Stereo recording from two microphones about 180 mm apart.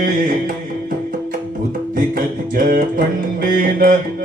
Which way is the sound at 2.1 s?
50° right (ahead or behind).